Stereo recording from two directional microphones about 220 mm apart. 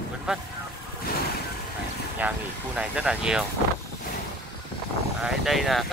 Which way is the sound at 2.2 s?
5° right (ahead or behind).